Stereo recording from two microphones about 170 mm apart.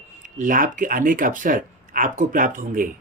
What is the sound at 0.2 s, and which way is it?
Speech, 50° right (ahead or behind).